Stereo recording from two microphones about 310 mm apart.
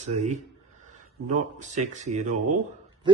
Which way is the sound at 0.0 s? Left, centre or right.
Right.